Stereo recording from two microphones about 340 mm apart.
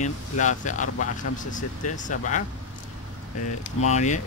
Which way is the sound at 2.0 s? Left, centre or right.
Left.